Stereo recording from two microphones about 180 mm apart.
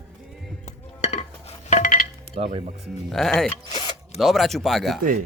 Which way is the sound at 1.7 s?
50° left (ahead or behind).